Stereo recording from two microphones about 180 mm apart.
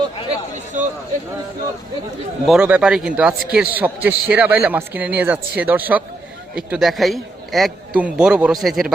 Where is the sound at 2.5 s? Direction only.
5° right (ahead or behind).